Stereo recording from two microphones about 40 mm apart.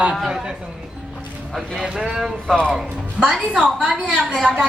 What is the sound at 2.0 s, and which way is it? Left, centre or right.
Speech, centre.